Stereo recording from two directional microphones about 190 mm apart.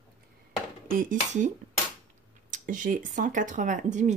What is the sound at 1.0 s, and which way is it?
Speech, 40° right (ahead or behind).